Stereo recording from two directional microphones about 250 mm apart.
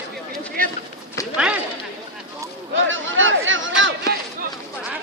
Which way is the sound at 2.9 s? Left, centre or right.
Right.